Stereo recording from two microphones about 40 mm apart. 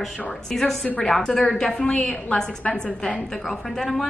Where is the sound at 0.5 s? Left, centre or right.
Centre.